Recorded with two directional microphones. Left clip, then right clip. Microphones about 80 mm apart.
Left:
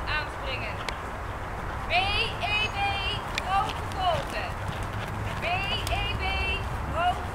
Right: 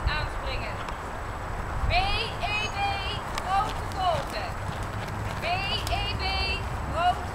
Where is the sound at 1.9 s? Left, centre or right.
Centre.